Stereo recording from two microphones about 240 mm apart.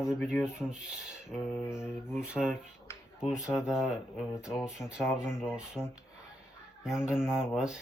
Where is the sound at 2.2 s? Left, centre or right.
Centre.